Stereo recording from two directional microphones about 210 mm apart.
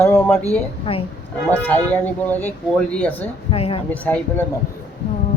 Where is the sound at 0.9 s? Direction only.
25° left (ahead or behind).